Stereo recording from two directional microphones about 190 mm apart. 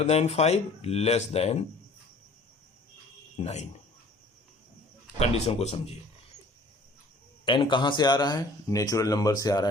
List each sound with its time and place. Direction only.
0.0 s speech: 35° left (ahead or behind)
3.3 s speech: 35° left (ahead or behind)
5.2 s speech: 35° left (ahead or behind)
7.4 s speech: 25° left (ahead or behind)